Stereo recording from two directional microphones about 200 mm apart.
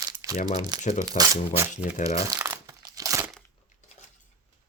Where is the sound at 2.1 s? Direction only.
15° right (ahead or behind).